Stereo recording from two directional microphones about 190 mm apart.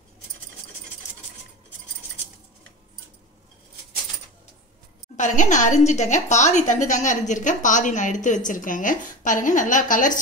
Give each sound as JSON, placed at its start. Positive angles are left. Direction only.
{"t": 5.1, "sound": "a woman's voice", "side_deg": 40}